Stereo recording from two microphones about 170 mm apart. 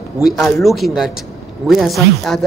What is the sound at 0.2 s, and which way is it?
Speech, centre (ahead or behind).